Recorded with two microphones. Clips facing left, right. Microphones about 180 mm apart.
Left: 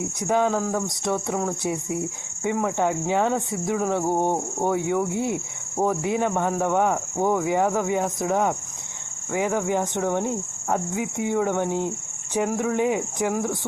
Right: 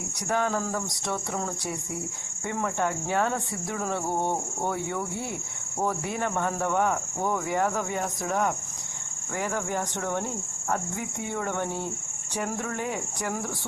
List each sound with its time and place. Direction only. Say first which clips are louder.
0.2 s speech: left 5 dB; 15° left (ahead or behind)
0.9 s a sound: left 6 dB; 20° left (ahead or behind)
1.6 s speech: left 7 dB; 20° left (ahead or behind)